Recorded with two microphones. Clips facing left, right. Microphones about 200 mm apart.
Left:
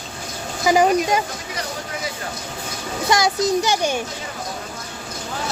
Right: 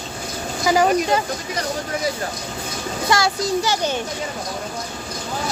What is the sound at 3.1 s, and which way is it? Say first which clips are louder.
Speech: left 2 dB; 20° left (ahead or behind).